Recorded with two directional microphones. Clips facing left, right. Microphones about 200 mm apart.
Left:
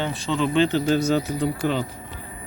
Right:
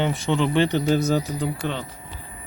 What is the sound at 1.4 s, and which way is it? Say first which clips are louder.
Speech: left 4 dB; centre (ahead or behind).